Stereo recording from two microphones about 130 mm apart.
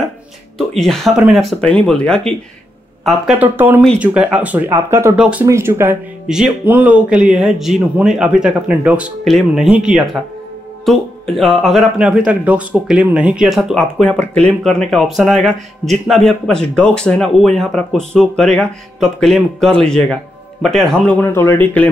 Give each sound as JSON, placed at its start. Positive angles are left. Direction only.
{"t": 0.6, "sound": "speech", "side_deg": 5}
{"t": 1.5, "sound": "speech", "side_deg": 10}
{"t": 3.3, "sound": "speech", "side_deg": -15}
{"t": 6.2, "sound": "speech", "side_deg": -5}
{"t": 9.2, "sound": "speech", "side_deg": 0}
{"t": 9.7, "sound": "speech", "side_deg": -10}
{"t": 21.2, "sound": "speech", "side_deg": 15}